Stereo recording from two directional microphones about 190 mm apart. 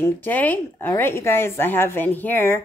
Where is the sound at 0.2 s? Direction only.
10° left (ahead or behind).